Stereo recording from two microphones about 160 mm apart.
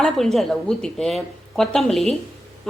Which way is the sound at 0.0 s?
Centre (ahead or behind).